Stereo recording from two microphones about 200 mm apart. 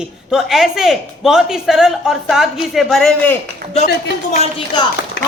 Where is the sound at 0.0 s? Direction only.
5° right (ahead or behind).